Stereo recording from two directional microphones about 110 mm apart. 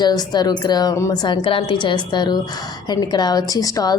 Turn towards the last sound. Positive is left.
turn(degrees=35)  # may be behind; listen again after turning